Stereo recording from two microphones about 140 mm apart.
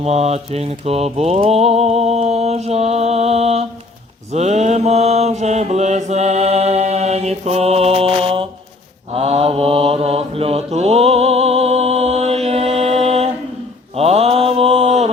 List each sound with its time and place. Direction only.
0.0 s mantra: 50° right (ahead or behind)